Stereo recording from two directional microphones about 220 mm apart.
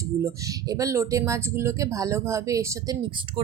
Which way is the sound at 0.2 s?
15° right (ahead or behind).